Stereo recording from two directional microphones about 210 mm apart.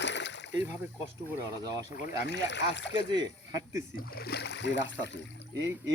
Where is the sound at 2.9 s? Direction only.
20° right (ahead or behind).